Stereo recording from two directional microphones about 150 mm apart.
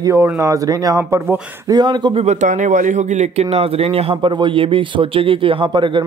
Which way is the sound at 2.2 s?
55° right (ahead or behind).